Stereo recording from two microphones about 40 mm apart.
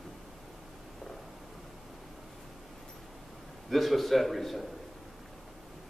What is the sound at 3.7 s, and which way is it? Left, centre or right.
Speech, centre.